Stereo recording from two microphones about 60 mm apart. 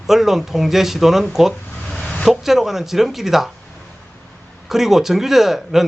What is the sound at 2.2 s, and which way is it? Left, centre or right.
Speech, centre.